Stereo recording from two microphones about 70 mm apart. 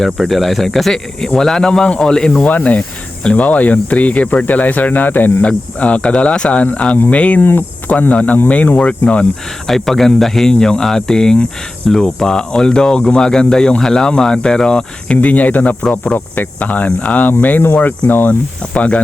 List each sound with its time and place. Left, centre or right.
0.0 s speech: centre
2.4 s speech: left
9.6 s speech: centre; by 15.7 s left
15.8 s speech: centre
16.1 s speech: left